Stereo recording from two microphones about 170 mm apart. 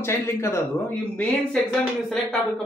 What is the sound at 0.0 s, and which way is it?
Speech, 15° left (ahead or behind).